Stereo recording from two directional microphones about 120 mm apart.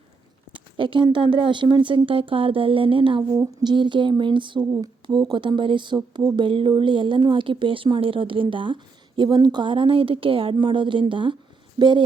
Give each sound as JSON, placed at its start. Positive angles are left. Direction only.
{"t": 0.5, "sound": "a sound", "side_deg": -45}
{"t": 1.1, "sound": "speech", "side_deg": -45}
{"t": 4.6, "sound": "speech", "side_deg": -30}